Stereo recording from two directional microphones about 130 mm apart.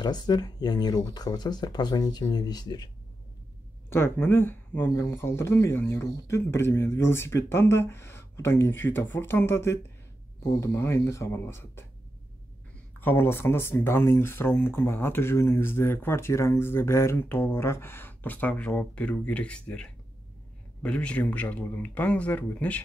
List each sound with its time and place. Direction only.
0.0 s speech: 30° left (ahead or behind)
3.9 s speech: 20° left (ahead or behind)
13.0 s speech: 15° left (ahead or behind)